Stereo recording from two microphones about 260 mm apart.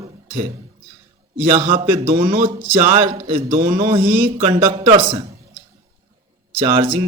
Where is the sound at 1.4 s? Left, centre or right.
Right.